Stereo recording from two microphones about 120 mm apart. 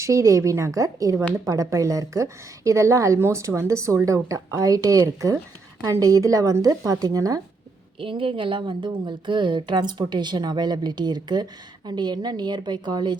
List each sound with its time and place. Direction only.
0.0 s a woman's voice: 25° right (ahead or behind)
7.9 s speech: 45° right (ahead or behind)